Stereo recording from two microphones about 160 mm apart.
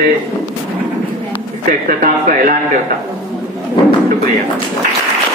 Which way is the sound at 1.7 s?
60° right (ahead or behind).